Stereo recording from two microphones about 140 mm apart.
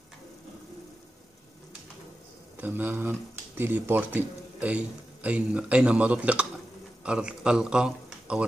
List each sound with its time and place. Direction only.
2.5 s a man's voice: 15° right (ahead or behind)